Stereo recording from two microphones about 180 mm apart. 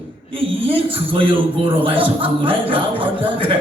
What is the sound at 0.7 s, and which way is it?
A man's voice, 30° right (ahead or behind).